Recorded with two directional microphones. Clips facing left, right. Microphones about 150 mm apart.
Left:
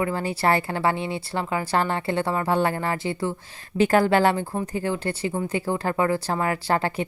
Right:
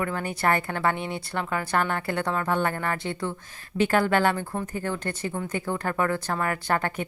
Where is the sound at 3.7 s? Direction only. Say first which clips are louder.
Left 3 dB; 35° left (ahead or behind).